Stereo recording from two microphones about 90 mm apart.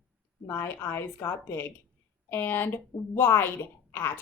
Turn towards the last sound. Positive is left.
turn(degrees=25)  # may be behind; listen again after turning